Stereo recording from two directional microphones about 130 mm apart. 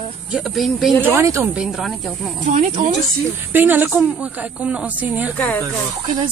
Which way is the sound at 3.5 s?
15° right (ahead or behind).